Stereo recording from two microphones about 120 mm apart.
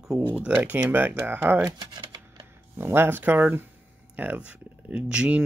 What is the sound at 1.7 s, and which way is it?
Typing, 35° right (ahead or behind).